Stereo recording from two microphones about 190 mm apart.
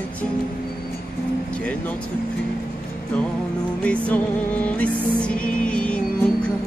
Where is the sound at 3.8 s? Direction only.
5° left (ahead or behind).